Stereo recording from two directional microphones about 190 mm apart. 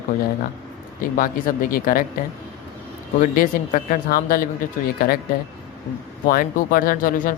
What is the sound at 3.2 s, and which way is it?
Speech, 45° left (ahead or behind).